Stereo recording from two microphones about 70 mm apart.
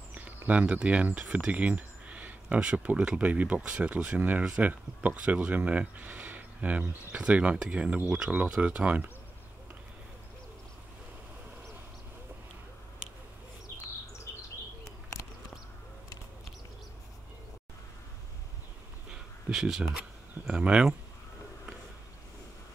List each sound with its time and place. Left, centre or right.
0.1 s speech: right
1.5 s a sound: right
2.7 s speech: centre
14.9 s bird: left
19.5 s speech: centre
20.0 s speech: centre